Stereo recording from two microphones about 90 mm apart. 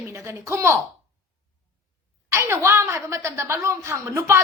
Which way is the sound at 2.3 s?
30° right (ahead or behind).